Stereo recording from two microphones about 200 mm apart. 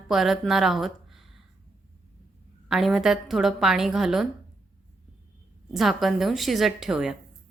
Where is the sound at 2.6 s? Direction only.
Centre (ahead or behind).